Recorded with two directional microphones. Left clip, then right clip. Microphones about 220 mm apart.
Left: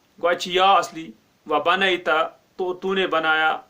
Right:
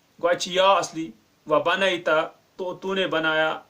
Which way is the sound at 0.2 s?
25° left (ahead or behind).